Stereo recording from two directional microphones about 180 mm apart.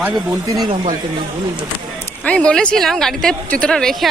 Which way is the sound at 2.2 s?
5° left (ahead or behind).